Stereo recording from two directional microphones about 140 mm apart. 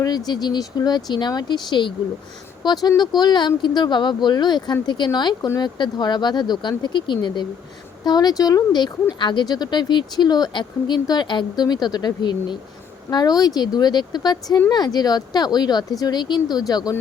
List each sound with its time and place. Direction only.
0.3 s speech: 30° left (ahead or behind)